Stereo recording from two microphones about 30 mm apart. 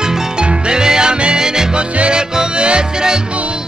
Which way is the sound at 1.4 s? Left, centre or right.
Right.